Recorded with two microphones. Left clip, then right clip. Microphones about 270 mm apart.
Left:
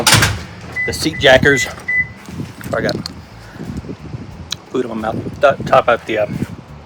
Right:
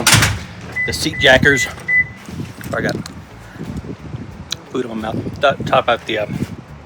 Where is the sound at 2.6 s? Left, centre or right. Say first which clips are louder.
Left 2 dB; centre.